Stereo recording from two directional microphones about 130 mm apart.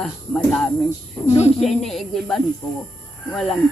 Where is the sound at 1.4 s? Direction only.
55° left (ahead or behind).